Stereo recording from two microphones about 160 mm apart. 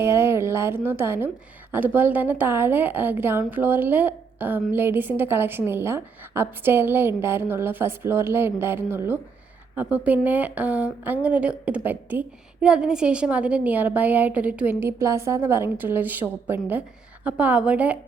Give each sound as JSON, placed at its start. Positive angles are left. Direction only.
{"t": 0.0, "sound": "a woman's voice", "side_deg": -15}